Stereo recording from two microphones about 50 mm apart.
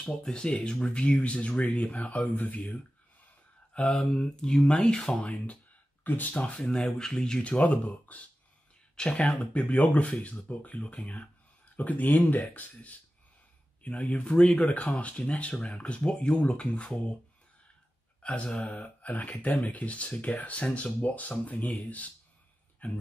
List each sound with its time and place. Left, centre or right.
0.0 s speech: centre; by 2.8 s left
3.7 s speech: centre
6.0 s speech: left
7.0 s speech: centre
7.4 s speech: left
8.9 s speech: centre
18.2 s speech: left